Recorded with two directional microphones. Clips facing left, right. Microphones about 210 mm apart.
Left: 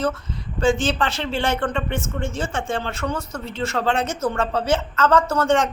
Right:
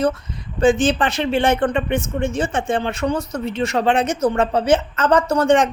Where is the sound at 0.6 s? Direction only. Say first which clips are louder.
Right 4 dB; 20° right (ahead or behind).